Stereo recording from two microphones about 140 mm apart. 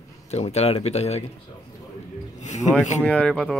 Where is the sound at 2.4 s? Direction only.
55° left (ahead or behind).